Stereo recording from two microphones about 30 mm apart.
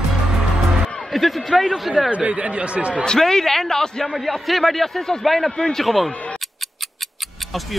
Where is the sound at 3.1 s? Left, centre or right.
Centre.